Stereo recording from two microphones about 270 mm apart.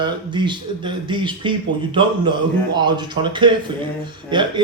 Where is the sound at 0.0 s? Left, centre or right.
Centre.